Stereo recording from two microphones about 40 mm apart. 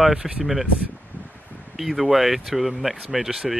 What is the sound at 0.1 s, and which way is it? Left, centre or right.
Speech, centre.